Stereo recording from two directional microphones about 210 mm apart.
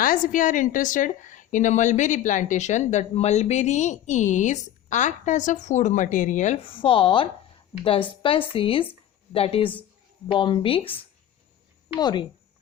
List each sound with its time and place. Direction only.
0.0 s a woman's voice: 40° left (ahead or behind)
11.9 s speech: 20° left (ahead or behind)